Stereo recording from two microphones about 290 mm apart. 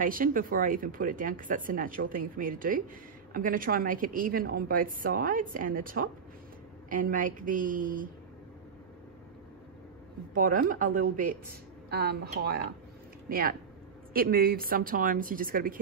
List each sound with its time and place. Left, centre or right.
0.0 s a woman's voice: right
10.3 s a woman's voice: right